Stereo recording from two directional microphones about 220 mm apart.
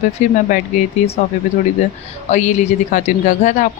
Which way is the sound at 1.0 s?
30° left (ahead or behind).